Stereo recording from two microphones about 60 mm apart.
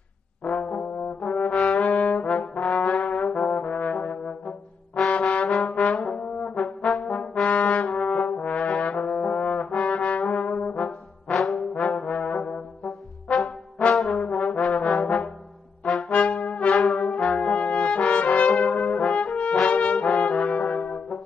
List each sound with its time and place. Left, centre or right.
0.5 s brass instrument: centre
2.0 s trombone: centre
4.5 s brass instrument: centre
5.2 s trombone: centre
8.3 s brass instrument: centre
10.5 s trombone: centre
16.1 s brass instrument: left
16.3 s brass instrument: centre
18.1 s brass instrument: centre
18.6 s brass instrument: centre
19.7 s brass instrument: left
20.0 s brass instrument: centre